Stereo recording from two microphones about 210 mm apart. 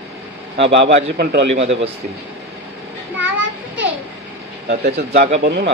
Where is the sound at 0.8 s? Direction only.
50° right (ahead or behind).